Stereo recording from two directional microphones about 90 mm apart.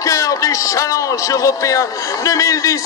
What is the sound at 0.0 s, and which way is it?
A man's voice, 40° left (ahead or behind).